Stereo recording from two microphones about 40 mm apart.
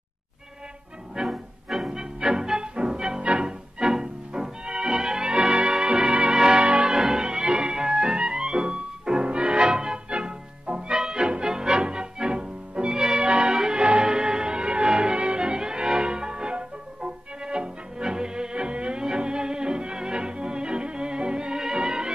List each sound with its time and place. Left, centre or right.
1.2 s music: centre
1.9 s music: centre
3.8 s music: centre
4.3 s music: right
5.3 s music: right
6.3 s music: centre
6.6 s change ringing: right
6.9 s music: centre
7.2 s music: centre
11.4 s music: centre